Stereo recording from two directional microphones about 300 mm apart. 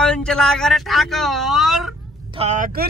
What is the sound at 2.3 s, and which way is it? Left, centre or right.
Speech, right.